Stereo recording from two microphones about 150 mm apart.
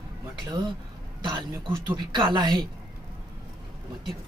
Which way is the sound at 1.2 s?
30° right (ahead or behind).